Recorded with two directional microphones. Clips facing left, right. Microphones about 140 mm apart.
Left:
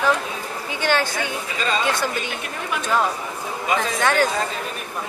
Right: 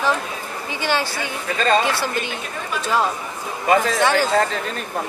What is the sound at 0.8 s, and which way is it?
Speech, 10° right (ahead or behind).